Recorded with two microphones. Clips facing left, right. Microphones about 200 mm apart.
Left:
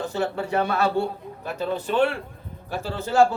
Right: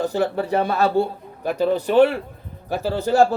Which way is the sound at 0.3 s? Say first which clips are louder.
Right 3 dB; 35° right (ahead or behind).